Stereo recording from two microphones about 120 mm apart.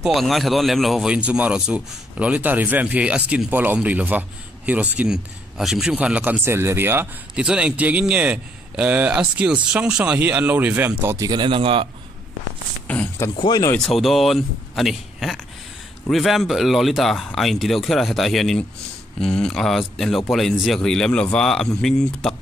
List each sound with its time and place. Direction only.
0.0 s speech: centre (ahead or behind); by 11.1 s 15° right (ahead or behind)
11.1 s speech: 35° right (ahead or behind)
12.8 s speech: 10° left (ahead or behind)
13.4 s speech: 35° left (ahead or behind)
13.7 s speech: centre (ahead or behind)